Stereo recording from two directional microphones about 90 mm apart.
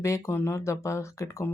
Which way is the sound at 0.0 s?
35° left (ahead or behind).